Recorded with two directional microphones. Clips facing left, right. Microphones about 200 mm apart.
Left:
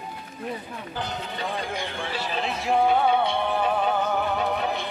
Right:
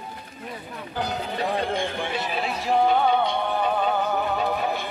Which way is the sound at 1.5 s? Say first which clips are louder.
Right 5 dB; 55° right (ahead or behind).